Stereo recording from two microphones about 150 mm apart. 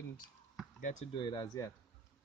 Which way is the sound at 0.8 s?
60° left (ahead or behind).